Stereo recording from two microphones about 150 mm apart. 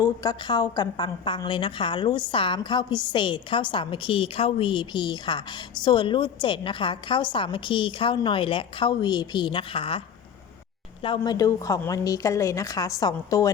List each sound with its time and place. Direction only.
0.0 s a woman's voice: 25° left (ahead or behind)
11.0 s a woman's voice: 30° left (ahead or behind)